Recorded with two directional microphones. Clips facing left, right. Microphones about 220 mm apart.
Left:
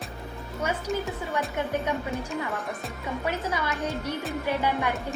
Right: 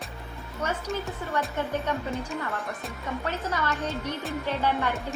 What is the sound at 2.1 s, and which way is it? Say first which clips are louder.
Speech: left 1 dB; centre (ahead or behind).